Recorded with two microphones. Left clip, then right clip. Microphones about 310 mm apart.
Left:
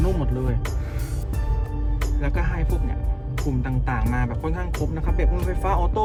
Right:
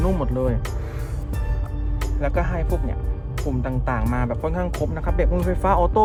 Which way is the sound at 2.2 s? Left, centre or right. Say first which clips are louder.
Right 7 dB; centre.